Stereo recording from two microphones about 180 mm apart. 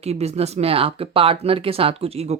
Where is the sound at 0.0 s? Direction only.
35° right (ahead or behind).